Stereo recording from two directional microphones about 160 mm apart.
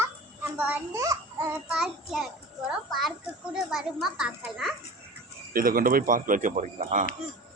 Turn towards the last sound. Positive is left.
turn(degrees=-50)  # may be behind; listen again after turning